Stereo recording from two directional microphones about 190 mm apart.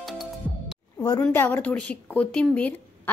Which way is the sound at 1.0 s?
20° left (ahead or behind).